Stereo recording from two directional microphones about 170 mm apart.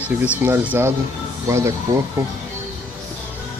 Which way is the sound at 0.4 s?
10° right (ahead or behind).